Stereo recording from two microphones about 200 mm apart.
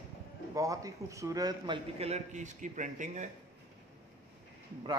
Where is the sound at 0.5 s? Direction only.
15° right (ahead or behind); by 3.3 s 40° right (ahead or behind).